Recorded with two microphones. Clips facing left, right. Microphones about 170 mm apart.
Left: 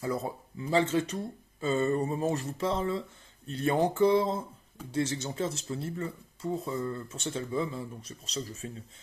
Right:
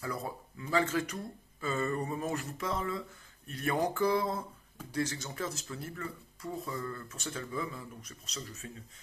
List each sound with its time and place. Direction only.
0.0 s speech: 25° left (ahead or behind)